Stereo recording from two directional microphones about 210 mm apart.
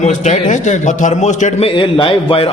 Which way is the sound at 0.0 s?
35° left (ahead or behind).